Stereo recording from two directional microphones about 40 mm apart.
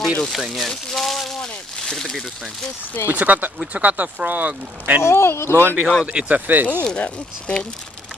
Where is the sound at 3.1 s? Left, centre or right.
Right.